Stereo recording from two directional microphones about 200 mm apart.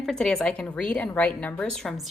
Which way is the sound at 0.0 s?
Centre (ahead or behind).